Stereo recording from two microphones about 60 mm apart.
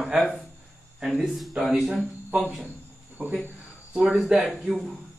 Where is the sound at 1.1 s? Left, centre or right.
Centre.